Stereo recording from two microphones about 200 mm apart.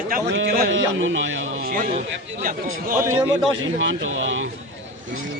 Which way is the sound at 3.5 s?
70° right (ahead or behind).